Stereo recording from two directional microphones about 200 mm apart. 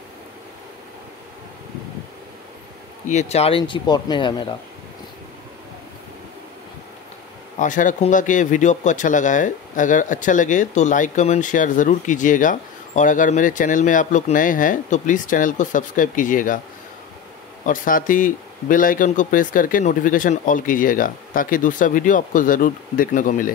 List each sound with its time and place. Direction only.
3.1 s speech: 35° left (ahead or behind)
7.5 s speech: 40° left (ahead or behind)
17.6 s speech: 45° left (ahead or behind)